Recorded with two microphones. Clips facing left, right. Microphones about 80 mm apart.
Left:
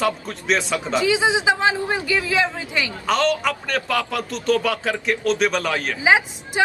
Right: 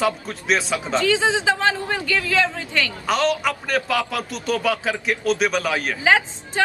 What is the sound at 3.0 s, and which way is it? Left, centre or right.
A man's voice, centre.